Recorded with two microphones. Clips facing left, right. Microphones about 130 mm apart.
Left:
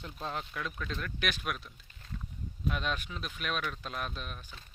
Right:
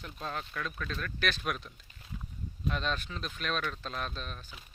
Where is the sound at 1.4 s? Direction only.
Centre (ahead or behind).